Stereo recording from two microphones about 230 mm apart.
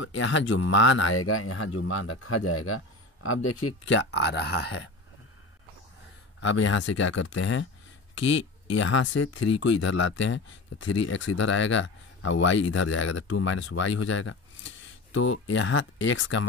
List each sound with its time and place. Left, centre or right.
0.0 s speech: left
6.4 s speech: left